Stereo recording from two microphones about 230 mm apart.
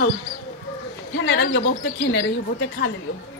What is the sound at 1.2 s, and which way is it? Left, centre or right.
Speech, left.